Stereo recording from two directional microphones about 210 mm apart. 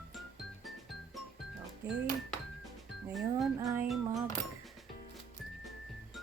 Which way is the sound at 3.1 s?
Centre (ahead or behind).